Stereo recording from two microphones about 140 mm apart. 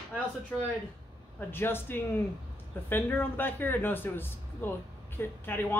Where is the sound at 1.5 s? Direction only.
15° left (ahead or behind).